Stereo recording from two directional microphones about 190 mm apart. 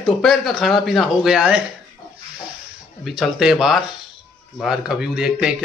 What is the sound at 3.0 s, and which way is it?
Speech, 5° right (ahead or behind).